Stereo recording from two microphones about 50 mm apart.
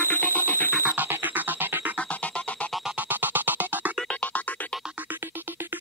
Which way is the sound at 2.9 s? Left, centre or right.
Right.